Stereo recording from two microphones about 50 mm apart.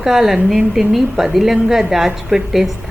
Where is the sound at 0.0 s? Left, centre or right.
Centre.